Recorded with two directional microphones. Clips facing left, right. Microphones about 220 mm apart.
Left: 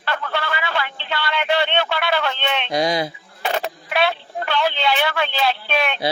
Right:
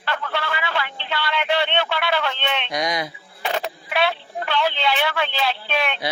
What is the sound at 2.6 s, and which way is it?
Speech, 30° left (ahead or behind).